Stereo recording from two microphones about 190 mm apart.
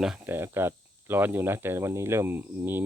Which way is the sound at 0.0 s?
5° right (ahead or behind).